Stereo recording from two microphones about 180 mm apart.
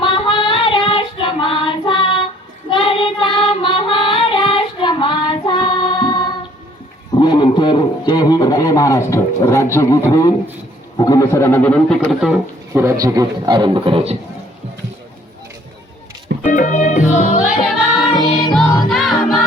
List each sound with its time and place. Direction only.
0.0 s child singing: 30° left (ahead or behind)
7.1 s a man's voice: 25° left (ahead or behind); by 12.4 s centre (ahead or behind)
12.7 s a man's voice: 15° right (ahead or behind); by 14.2 s 30° right (ahead or behind)
16.4 s music: 45° left (ahead or behind)
18.1 s music: 25° left (ahead or behind)
18.9 s music: centre (ahead or behind)